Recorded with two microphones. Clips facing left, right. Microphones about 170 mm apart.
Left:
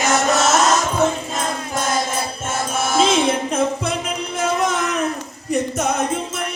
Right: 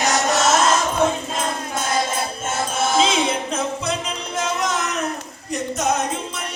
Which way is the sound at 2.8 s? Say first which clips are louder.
Left 2 dB; 50° left (ahead or behind).